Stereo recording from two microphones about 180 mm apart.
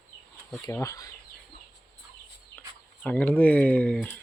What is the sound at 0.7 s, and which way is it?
Speech, 15° left (ahead or behind).